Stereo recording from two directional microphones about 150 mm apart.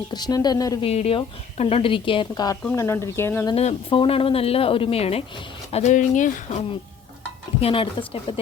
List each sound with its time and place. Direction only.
0.1 s a woman's voice: 25° left (ahead or behind)
0.8 s a woman's voice: 40° left (ahead or behind); by 3.4 s 15° left (ahead or behind)
3.5 s a woman's voice: 45° left (ahead or behind)
5.7 s speech: 50° left (ahead or behind)
7.6 s a woman's voice: 40° left (ahead or behind)